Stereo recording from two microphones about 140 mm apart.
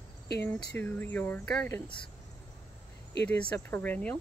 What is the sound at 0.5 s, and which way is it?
Speech, 15° left (ahead or behind).